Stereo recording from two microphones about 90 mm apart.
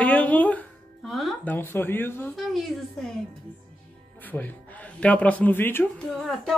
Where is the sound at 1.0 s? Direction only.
Centre (ahead or behind).